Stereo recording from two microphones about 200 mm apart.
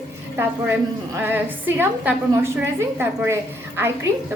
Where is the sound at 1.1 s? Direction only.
10° right (ahead or behind).